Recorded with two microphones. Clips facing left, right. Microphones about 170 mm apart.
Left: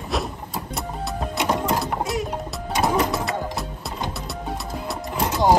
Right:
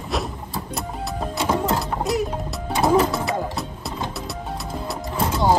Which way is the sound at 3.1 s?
Centre (ahead or behind).